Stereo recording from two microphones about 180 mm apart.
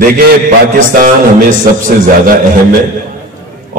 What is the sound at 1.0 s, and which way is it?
Speech, 50° right (ahead or behind).